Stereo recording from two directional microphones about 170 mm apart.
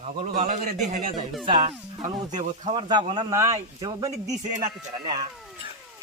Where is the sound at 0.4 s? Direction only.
45° right (ahead or behind).